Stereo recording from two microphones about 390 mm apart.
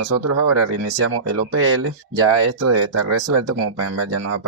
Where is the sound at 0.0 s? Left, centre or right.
Right.